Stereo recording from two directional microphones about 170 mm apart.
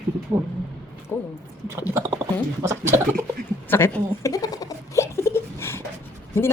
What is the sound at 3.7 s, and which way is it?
Giggle, 15° left (ahead or behind).